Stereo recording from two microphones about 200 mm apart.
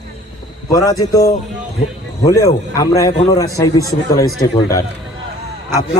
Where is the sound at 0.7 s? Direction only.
15° left (ahead or behind).